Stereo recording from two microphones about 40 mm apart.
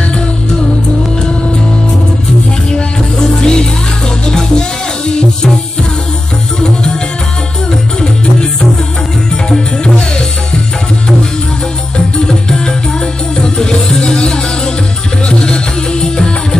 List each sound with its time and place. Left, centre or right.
2.7 s music: centre
6.6 s music: centre
9.5 s music: left
12.3 s music: centre